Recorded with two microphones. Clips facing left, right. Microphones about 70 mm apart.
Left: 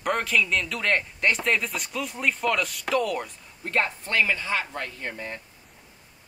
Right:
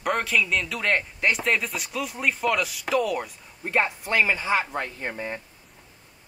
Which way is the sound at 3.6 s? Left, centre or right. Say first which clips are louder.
Right 2 dB; centre.